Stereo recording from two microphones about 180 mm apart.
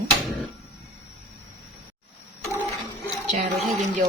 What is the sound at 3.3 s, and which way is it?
Speech, 40° right (ahead or behind).